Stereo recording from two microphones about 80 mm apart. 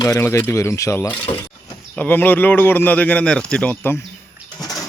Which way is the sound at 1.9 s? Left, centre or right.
Left.